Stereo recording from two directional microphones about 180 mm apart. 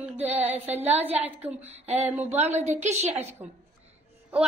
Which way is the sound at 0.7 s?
35° right (ahead or behind).